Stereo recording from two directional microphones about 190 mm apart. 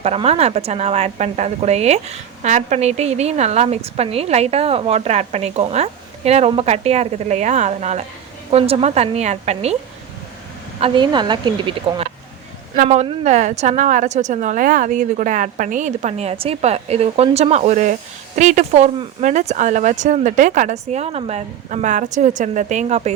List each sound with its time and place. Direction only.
0.0 s speech: 35° right (ahead or behind)
10.8 s a woman's voice: 30° right (ahead or behind)
12.7 s speech: 40° right (ahead or behind)